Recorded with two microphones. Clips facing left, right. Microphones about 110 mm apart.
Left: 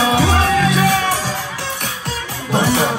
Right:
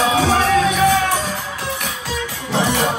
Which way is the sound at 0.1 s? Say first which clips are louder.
Even; 70° left (ahead or behind).